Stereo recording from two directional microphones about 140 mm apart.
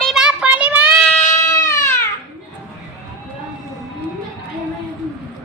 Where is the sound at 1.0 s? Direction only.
20° left (ahead or behind).